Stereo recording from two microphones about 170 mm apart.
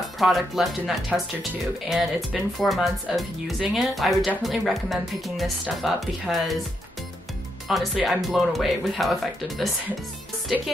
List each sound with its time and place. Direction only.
0.2 s speech: centre (ahead or behind)
7.6 s speech: centre (ahead or behind)